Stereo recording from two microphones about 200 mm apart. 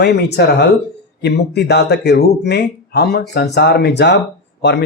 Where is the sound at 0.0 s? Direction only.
55° left (ahead or behind).